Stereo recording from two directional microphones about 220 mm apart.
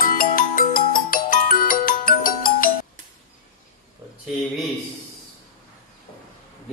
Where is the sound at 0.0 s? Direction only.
40° left (ahead or behind).